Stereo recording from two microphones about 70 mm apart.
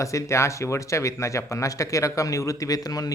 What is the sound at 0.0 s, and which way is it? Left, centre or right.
Speech, left.